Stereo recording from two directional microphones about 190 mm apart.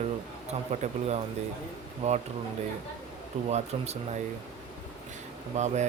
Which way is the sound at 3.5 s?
35° right (ahead or behind).